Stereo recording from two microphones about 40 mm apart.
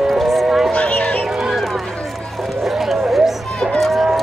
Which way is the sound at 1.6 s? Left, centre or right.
Centre.